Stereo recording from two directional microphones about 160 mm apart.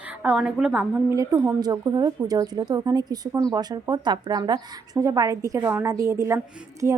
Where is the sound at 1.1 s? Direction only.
20° right (ahead or behind).